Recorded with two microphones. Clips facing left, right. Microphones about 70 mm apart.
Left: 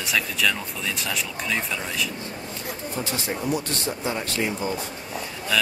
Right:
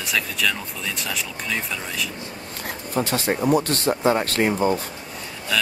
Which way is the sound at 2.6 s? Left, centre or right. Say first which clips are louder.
Right 6 dB; right.